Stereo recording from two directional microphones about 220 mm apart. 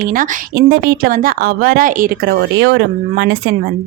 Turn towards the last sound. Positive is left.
turn(degrees=-50)  # may be behind; listen again after turning